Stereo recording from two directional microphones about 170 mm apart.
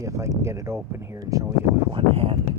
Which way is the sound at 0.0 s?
15° right (ahead or behind).